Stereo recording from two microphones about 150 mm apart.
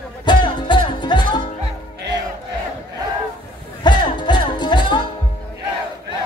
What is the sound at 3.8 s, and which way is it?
Music, 30° left (ahead or behind).